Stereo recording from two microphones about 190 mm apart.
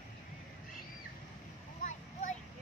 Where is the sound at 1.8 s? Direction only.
40° left (ahead or behind).